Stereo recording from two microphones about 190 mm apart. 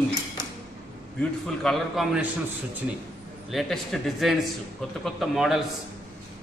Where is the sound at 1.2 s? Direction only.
Centre (ahead or behind).